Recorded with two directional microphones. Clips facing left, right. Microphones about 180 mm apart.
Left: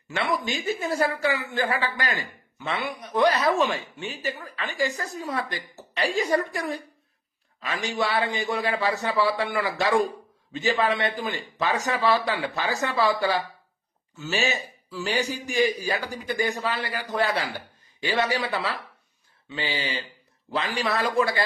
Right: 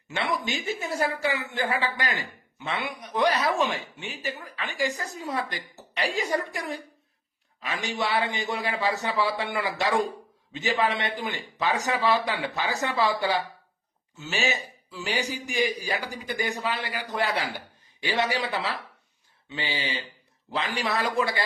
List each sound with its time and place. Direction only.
0.3 s a man's voice: 20° right (ahead or behind)
19.8 s speech: 15° right (ahead or behind)